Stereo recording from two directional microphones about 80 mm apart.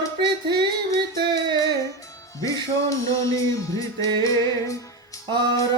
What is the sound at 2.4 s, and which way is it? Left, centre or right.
Music, left.